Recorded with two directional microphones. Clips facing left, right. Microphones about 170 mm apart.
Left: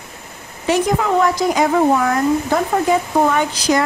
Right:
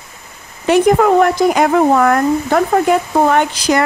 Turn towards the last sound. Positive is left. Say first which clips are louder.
# right 3 dB
turn(degrees=-65)  # may be behind; listen again after turning